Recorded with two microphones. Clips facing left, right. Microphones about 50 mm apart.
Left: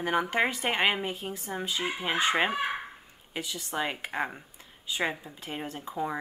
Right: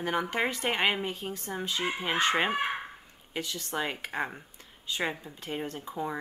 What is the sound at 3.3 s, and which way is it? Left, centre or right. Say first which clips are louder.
Speech: right 1 dB; centre.